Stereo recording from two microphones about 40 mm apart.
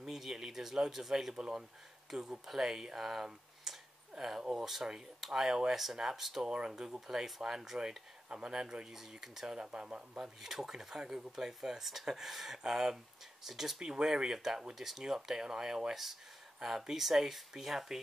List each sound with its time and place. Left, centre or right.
0.0 s speech: centre
3.7 s a sound: centre
4.2 s speech: centre
6.4 s speech: right
8.3 s speech: right
9.7 s speech: right
10.1 s speech: centre